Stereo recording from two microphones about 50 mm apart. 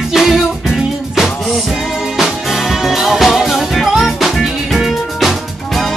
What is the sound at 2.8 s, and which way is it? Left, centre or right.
Music, centre.